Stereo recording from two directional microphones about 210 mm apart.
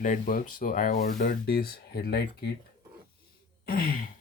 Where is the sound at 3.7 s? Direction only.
45° left (ahead or behind).